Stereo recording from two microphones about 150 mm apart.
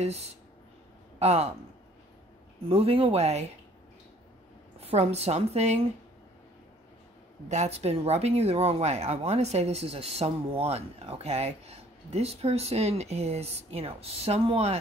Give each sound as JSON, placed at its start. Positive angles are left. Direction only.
{"t": 0.0, "sound": "speech", "side_deg": -45}
{"t": 2.7, "sound": "speech", "side_deg": -40}
{"t": 4.7, "sound": "speech", "side_deg": -45}
{"t": 7.4, "sound": "speech", "side_deg": -50}